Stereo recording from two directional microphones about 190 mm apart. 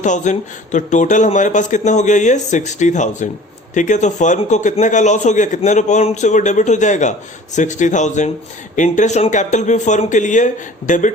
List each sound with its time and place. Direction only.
0.0 s a man's voice: 40° left (ahead or behind)